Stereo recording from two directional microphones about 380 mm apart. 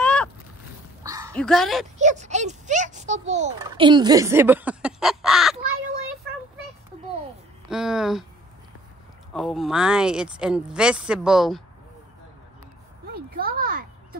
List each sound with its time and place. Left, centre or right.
0.0 s rowboat: centre
1.0 s dog: centre
1.3 s speech: centre
2.0 s a child's voice: centre
7.7 s speech: centre
9.3 s speech: centre
13.1 s a sound: right